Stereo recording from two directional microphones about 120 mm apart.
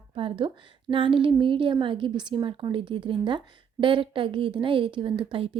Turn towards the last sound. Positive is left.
turn(degrees=-50)  # may be behind; listen again after turning